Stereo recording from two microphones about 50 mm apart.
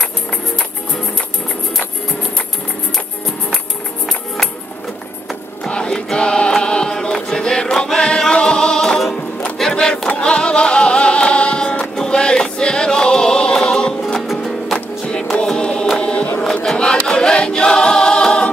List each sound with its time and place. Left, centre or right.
5.6 s music: centre
6.6 s a sound: centre
7.2 s music: centre
14.2 s music: centre
15.6 s choir: centre
16.0 s choir: left
16.7 s choir: centre